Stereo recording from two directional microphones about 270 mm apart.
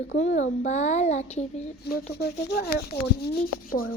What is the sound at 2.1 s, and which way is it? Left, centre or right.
Speech, left.